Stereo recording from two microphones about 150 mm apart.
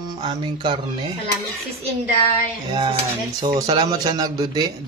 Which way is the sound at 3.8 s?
25° right (ahead or behind).